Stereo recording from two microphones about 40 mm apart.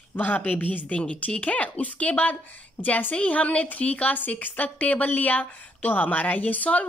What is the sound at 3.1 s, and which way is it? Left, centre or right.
A woman's voice, left.